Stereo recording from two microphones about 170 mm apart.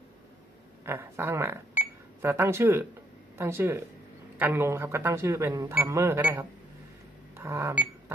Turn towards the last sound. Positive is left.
turn(degrees=-15)  # may be behind; listen again after turning